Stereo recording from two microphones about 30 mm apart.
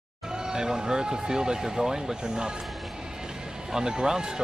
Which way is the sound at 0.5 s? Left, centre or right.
Right.